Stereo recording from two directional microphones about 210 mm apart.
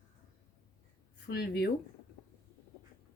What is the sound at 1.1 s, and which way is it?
Speech, 50° left (ahead or behind).